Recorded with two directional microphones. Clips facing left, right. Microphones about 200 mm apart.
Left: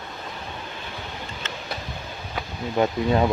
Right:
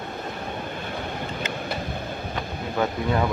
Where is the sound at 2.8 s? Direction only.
20° left (ahead or behind).